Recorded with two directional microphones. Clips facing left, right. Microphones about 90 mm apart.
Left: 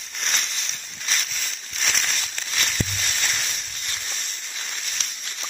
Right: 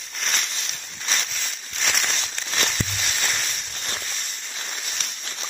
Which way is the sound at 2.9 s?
5° right (ahead or behind).